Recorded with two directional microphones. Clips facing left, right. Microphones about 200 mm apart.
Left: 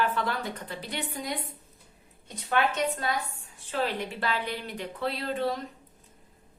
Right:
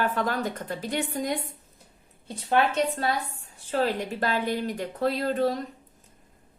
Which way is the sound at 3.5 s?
40° right (ahead or behind).